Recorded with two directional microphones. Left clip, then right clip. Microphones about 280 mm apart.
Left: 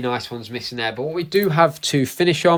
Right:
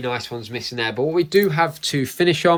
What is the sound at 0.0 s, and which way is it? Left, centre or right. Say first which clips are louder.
Speech: left 1 dB; centre.